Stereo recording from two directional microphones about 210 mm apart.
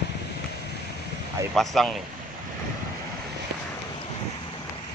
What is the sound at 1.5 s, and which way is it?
Speech, centre (ahead or behind).